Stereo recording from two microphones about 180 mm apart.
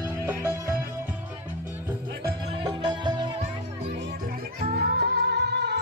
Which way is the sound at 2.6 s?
20° right (ahead or behind).